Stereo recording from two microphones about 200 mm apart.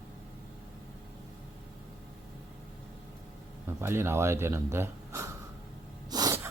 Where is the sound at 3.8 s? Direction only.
10° right (ahead or behind).